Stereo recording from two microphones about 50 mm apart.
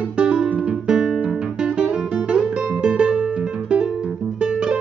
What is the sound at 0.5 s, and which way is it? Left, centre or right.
Guitar, right.